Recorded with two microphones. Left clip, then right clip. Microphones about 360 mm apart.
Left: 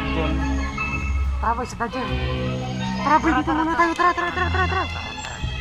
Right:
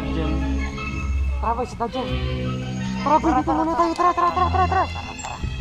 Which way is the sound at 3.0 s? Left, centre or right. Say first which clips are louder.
Even; centre.